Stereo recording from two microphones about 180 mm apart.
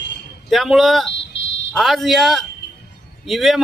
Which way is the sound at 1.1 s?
85° left.